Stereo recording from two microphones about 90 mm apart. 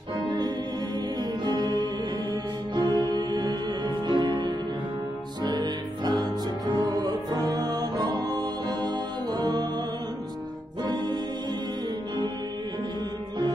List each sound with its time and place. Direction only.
1.4 s music: 55° right (ahead or behind)
10.8 s music: 50° right (ahead or behind)